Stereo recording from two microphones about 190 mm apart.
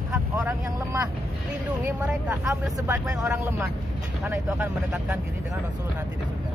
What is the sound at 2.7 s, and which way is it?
Speech, 20° right (ahead or behind).